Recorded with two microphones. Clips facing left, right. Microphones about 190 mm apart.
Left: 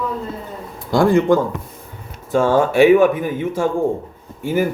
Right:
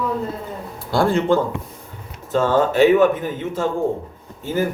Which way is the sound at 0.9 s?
15° left (ahead or behind).